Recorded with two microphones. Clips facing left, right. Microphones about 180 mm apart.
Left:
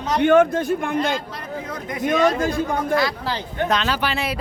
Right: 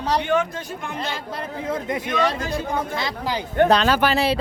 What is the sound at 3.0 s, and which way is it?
Speech, 20° right (ahead or behind).